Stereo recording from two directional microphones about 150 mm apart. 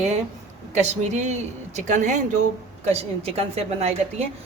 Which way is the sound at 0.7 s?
50° right (ahead or behind).